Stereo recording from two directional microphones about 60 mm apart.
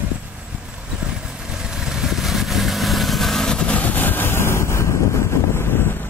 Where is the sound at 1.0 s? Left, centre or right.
Centre.